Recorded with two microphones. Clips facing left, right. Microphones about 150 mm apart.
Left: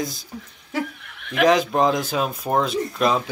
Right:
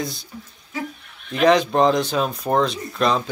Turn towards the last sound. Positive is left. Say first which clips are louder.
# left 1 dB
turn(degrees=5)  # may be behind; listen again after turning